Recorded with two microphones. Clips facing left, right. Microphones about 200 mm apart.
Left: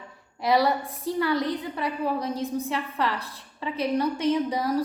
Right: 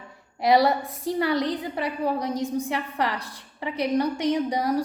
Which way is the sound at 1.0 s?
70° right (ahead or behind).